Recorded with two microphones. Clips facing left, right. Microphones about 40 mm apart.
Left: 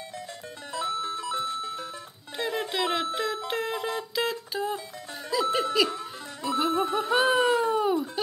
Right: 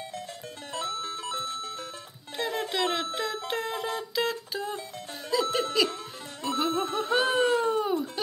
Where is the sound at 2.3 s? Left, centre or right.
Centre.